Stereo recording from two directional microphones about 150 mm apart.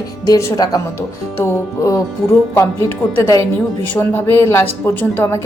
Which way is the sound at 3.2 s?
25° left (ahead or behind).